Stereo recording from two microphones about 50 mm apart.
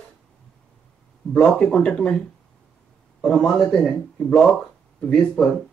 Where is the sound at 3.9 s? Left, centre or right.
Left.